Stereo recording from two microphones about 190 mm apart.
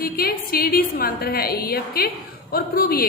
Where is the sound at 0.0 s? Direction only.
50° left (ahead or behind).